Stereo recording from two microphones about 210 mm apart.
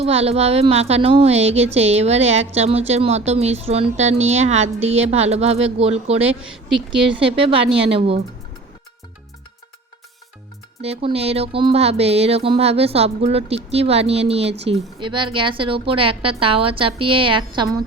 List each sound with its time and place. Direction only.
0.0 s a woman's voice: 30° right (ahead or behind)
7.4 s a woman's voice: 25° right (ahead or behind)
10.8 s a woman's voice: 30° right (ahead or behind)